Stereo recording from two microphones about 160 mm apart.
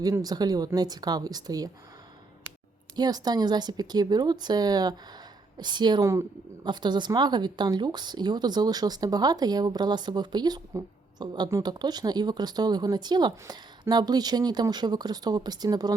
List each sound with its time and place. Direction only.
0.0 s speech: 25° right (ahead or behind)
2.9 s speech: 25° right (ahead or behind)